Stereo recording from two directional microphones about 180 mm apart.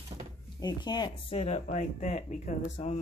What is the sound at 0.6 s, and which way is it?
Speech, 25° left (ahead or behind).